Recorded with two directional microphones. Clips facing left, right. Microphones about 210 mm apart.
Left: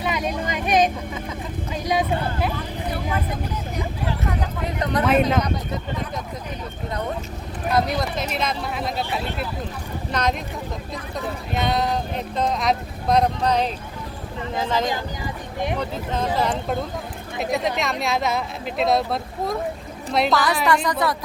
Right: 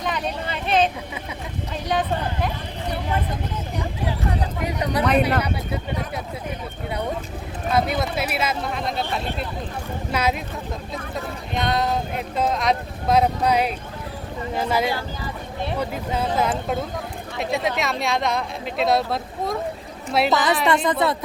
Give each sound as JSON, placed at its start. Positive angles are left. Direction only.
{"t": 0.0, "sound": "vehicle", "side_deg": 10}
{"t": 1.7, "sound": "speech", "side_deg": 10}
{"t": 4.6, "sound": "speech", "side_deg": -10}
{"t": 7.7, "sound": "speech", "side_deg": -5}
{"t": 10.1, "sound": "speech", "side_deg": -5}
{"t": 11.5, "sound": "speech", "side_deg": 0}
{"t": 14.8, "sound": "speech", "side_deg": 15}
{"t": 15.8, "sound": "speech", "side_deg": -10}
{"t": 20.3, "sound": "speech", "side_deg": -20}